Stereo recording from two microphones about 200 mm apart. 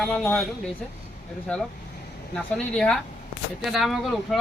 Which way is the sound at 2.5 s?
5° left (ahead or behind).